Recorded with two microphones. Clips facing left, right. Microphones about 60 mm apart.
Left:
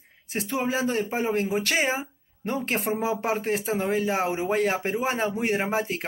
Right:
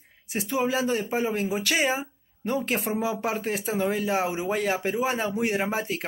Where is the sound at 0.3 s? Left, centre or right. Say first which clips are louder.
Right 1 dB; left.